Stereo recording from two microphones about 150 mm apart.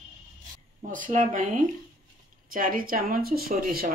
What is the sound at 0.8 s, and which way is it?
A man's voice, 60° right (ahead or behind).